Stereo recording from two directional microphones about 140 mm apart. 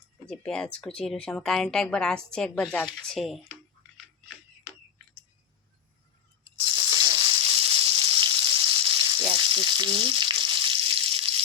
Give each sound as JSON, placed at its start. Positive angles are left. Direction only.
{"t": 0.3, "sound": "speech", "side_deg": 5}
{"t": 6.7, "sound": "frying", "side_deg": -30}